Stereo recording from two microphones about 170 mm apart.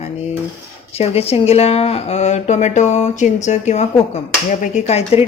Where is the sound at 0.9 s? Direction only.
35° left (ahead or behind).